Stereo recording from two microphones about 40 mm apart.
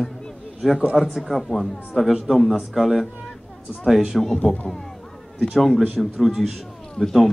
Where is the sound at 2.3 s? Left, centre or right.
Centre.